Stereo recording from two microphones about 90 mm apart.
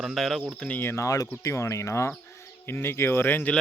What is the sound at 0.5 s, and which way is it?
Speech, 10° left (ahead or behind).